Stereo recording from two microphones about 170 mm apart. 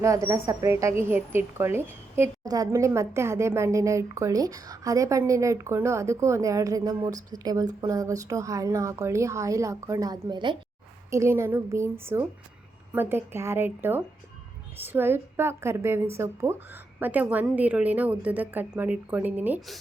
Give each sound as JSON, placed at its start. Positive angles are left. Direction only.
{"t": 0.0, "sound": "a woman's voice", "side_deg": -20}
{"t": 11.1, "sound": "a woman's voice", "side_deg": -15}